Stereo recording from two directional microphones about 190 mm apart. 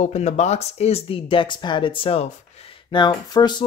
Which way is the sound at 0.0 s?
35° left (ahead or behind).